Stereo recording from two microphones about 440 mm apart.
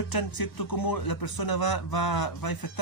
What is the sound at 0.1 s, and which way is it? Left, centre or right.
Speech, left.